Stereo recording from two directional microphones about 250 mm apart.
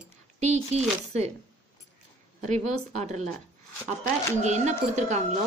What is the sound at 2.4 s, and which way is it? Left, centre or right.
Speech, right.